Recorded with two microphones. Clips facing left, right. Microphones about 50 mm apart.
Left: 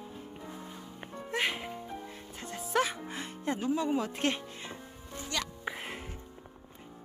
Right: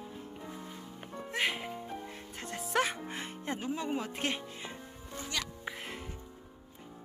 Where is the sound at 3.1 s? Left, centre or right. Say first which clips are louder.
Left 3 dB; right; by 5.4 s centre.